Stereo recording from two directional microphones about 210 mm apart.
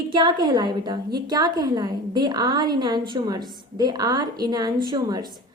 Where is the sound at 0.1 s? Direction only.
20° right (ahead or behind).